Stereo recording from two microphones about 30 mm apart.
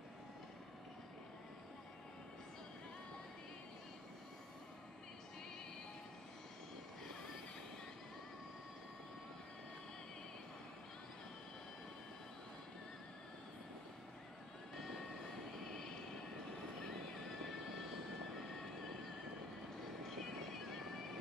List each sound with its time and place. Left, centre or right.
17.1 s music: centre
20.0 s horse: centre